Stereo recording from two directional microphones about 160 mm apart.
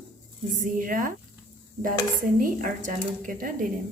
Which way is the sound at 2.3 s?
55° right (ahead or behind).